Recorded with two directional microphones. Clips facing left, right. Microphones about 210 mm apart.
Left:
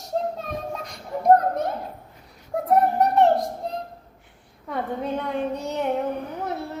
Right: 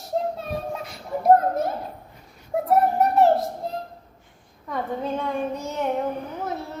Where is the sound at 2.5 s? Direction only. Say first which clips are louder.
Right 2 dB; centre (ahead or behind).